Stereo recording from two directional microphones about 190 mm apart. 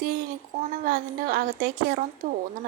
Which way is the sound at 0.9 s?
50° right (ahead or behind).